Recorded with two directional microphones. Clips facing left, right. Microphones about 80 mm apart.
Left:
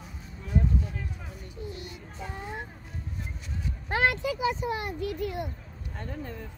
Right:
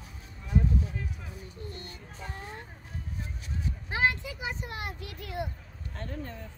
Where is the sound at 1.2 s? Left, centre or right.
Centre.